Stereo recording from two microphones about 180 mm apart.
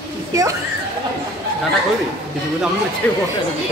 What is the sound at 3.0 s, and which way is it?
Speech, 5° left (ahead or behind).